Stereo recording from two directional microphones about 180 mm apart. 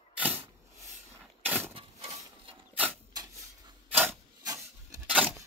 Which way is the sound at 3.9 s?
10° right (ahead or behind).